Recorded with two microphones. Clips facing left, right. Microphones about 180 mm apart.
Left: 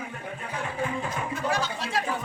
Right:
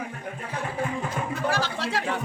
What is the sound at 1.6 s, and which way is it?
Chatter, 80° right.